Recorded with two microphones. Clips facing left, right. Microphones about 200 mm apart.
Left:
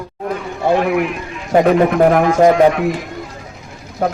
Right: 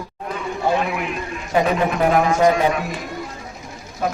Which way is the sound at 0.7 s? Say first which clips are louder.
Left 7 dB; 60° left (ahead or behind).